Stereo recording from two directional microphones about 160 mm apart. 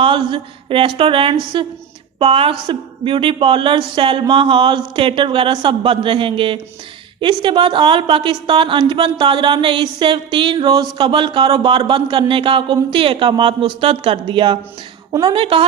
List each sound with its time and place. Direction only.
0.0 s a woman's voice: 35° right (ahead or behind)